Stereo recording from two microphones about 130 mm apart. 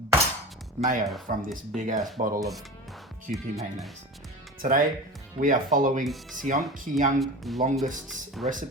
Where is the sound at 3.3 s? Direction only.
90° right.